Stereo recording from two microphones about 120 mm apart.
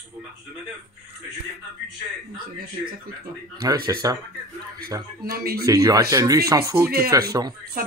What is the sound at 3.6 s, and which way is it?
Speech, 25° right (ahead or behind).